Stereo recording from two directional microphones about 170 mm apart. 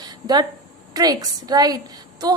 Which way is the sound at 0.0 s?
25° right (ahead or behind).